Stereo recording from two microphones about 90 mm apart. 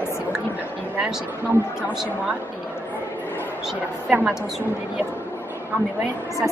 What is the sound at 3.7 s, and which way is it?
Speech, 15° right (ahead or behind).